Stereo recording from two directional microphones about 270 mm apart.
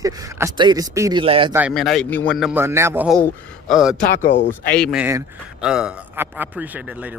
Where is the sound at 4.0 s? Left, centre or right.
Left.